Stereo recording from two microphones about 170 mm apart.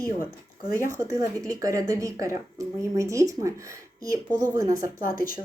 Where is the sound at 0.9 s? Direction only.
20° right (ahead or behind).